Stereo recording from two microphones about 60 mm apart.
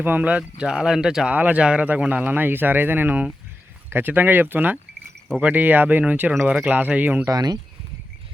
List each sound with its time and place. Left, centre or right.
0.0 s speech: right; by 1.3 s centre
1.3 s speech: right
7.3 s speech: right